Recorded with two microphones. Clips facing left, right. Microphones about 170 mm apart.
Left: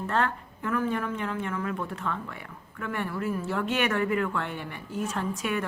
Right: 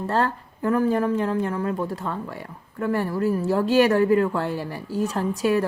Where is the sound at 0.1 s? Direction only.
35° right (ahead or behind).